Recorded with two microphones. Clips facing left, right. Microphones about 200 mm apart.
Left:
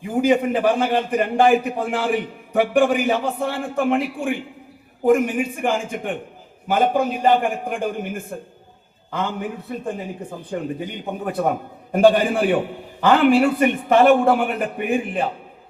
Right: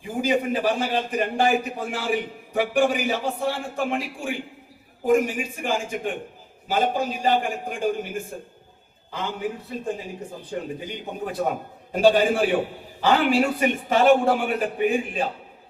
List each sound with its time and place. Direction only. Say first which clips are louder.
0.1 s a man's voice: left 5 dB; 55° left (ahead or behind)
10.8 s a man's voice: left 4 dB; 55° left (ahead or behind)